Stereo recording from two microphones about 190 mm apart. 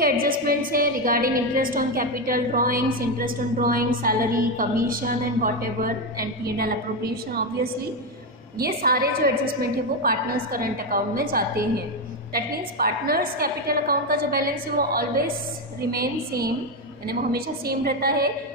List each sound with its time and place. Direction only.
0.0 s a woman's voice: 50° right (ahead or behind)
8.5 s a woman's voice: 50° right (ahead or behind)